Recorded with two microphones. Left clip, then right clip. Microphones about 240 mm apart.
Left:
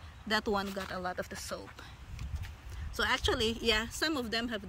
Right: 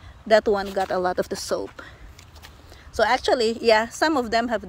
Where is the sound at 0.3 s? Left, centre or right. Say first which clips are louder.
Right 13 dB; centre.